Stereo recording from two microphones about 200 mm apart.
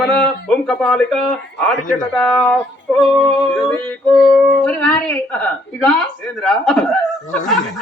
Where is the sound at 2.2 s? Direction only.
5° left (ahead or behind).